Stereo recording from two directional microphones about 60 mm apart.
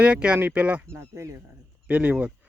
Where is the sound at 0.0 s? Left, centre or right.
Centre.